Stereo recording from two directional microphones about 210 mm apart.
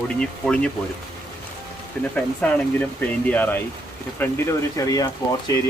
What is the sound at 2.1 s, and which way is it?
Speech, 5° left (ahead or behind).